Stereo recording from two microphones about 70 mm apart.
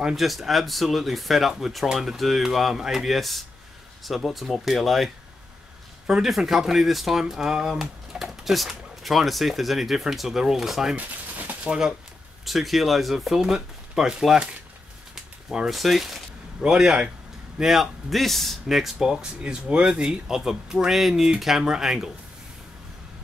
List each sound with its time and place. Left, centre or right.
0.0 s speech: centre
11.0 s a sound: right
12.4 s speech: centre